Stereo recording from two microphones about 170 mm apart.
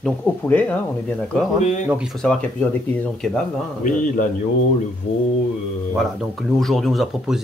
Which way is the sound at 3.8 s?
50° left (ahead or behind).